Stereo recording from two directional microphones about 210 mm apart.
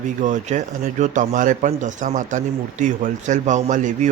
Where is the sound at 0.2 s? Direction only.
35° right (ahead or behind).